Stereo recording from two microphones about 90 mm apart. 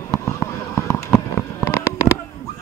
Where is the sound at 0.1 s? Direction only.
30° left (ahead or behind).